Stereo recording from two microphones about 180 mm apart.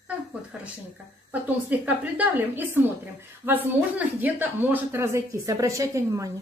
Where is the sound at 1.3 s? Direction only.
10° right (ahead or behind).